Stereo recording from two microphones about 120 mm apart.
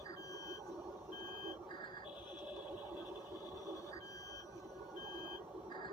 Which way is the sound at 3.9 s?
30° left (ahead or behind).